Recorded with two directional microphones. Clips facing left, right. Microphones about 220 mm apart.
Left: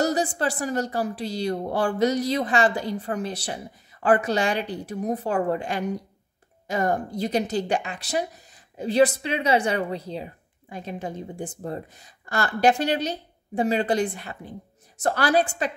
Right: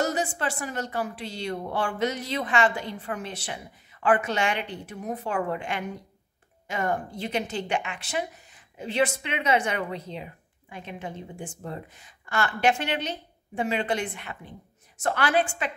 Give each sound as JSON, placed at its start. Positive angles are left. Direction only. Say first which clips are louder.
{"t": 0.0, "sound": "speech", "louder": "left 4 dB", "side_deg": 35}